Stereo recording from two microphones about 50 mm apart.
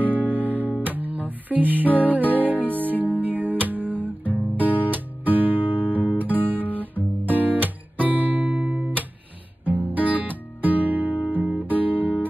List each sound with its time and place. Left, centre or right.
0.0 s music: right
6.5 s guitar: right
7.2 s music: right
10.1 s music: right
11.0 s guitar: right
11.9 s guitar: left